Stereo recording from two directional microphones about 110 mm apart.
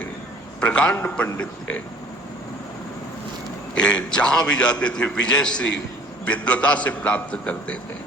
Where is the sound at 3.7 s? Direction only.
10° left (ahead or behind).